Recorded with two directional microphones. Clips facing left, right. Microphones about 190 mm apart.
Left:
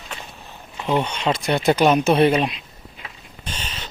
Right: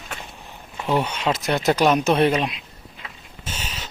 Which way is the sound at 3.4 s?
5° right (ahead or behind).